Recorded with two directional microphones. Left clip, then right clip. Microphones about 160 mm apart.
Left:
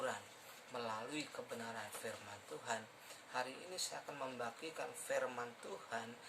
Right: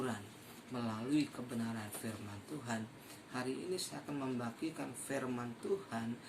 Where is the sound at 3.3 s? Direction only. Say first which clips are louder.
Right 3 dB; 10° left (ahead or behind).